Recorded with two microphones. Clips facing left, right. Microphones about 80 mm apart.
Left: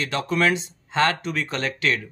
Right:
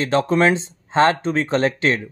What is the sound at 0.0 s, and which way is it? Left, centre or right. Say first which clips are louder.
Speech: right 6 dB; right.